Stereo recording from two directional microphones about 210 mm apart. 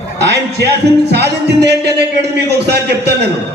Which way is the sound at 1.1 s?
50° right (ahead or behind).